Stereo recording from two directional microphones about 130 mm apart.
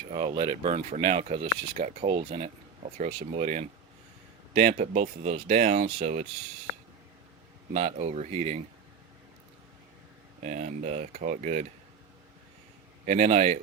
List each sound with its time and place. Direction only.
0.1 s speech: 35° right (ahead or behind)
1.0 s speech: 50° right (ahead or behind)
2.1 s speech: 45° right (ahead or behind); by 6.2 s 65° right (ahead or behind)
7.7 s speech: 45° right (ahead or behind)
8.0 s speech: 60° right (ahead or behind)
10.4 s speech: 70° right (ahead or behind)
13.1 s speech: 55° right (ahead or behind)